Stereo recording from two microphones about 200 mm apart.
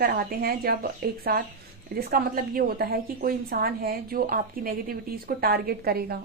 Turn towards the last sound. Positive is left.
turn(degrees=-50)  # may be behind; listen again after turning